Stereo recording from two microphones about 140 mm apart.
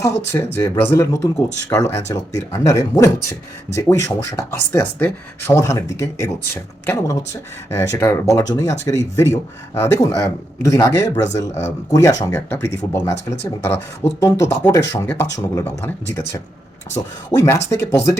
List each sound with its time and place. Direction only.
0.0 s speech: 20° left (ahead or behind)